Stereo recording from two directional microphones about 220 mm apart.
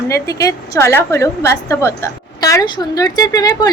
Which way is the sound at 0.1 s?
15° left (ahead or behind).